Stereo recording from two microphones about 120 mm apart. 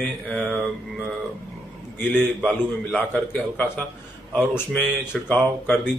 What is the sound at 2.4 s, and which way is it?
A man's voice, 10° left (ahead or behind).